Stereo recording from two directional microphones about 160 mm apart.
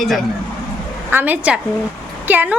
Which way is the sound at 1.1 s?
10° right (ahead or behind).